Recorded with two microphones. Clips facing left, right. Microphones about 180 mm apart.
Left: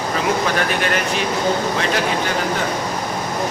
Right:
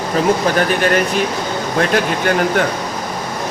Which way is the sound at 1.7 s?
50° right (ahead or behind).